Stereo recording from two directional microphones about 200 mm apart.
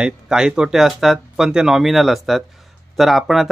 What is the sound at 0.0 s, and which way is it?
Speech, 5° right (ahead or behind).